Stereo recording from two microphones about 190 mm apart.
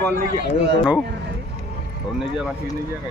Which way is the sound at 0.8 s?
Centre (ahead or behind).